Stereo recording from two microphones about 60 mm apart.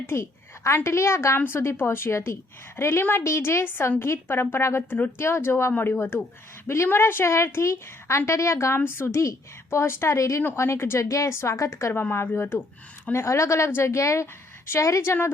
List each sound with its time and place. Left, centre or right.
0.0 s a woman's voice: left
3.0 s speech: left
3.2 s a woman's voice: left
10.2 s a woman's voice: left
10.5 s a woman's voice: left
13.1 s a woman's voice: left
15.0 s speech: left